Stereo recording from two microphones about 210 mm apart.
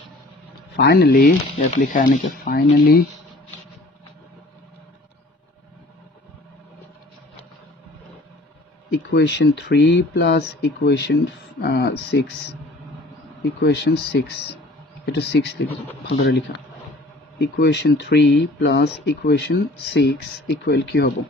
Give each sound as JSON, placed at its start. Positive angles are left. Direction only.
{"t": 0.7, "sound": "speech", "side_deg": 50}
{"t": 8.9, "sound": "speech", "side_deg": 55}
{"t": 17.4, "sound": "speech", "side_deg": 55}